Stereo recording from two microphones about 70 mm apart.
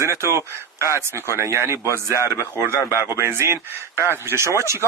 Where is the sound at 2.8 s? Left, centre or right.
Left.